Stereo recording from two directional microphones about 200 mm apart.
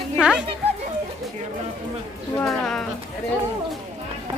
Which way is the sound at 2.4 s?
Centre (ahead or behind).